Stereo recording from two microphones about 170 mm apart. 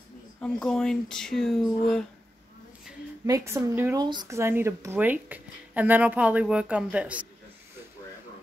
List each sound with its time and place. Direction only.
0.4 s speech: 5° left (ahead or behind)
3.3 s a woman's voice: 20° right (ahead or behind)